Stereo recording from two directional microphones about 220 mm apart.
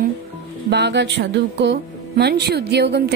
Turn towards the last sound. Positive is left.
turn(degrees=-50)  # may be behind; listen again after turning